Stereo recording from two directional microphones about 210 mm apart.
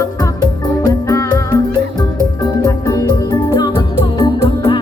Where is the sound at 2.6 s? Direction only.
15° left (ahead or behind).